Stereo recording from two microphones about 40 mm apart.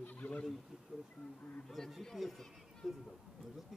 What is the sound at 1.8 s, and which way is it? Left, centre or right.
A man's voice, centre.